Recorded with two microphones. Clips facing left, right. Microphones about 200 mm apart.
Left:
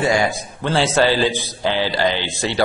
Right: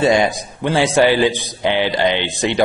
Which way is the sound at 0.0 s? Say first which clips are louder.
Right 4 dB; 20° right (ahead or behind).